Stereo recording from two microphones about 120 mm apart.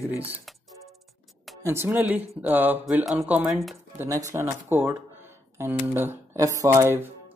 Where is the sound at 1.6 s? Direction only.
20° right (ahead or behind).